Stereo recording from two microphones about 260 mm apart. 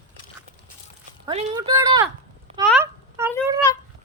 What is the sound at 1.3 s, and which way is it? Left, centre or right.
Speech, centre.